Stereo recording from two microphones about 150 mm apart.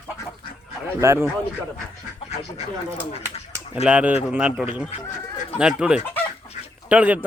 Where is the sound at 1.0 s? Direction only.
20° right (ahead or behind).